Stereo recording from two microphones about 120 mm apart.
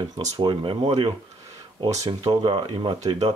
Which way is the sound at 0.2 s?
40° right (ahead or behind).